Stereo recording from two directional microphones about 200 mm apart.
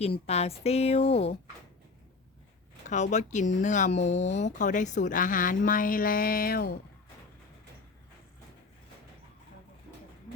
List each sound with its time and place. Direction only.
0.0 s speech: 30° left (ahead or behind)
2.8 s speech: 35° left (ahead or behind)